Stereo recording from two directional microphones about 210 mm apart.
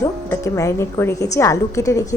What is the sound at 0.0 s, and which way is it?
A woman's voice, 15° left (ahead or behind).